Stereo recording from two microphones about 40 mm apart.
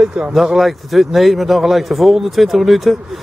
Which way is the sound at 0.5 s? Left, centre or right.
Centre.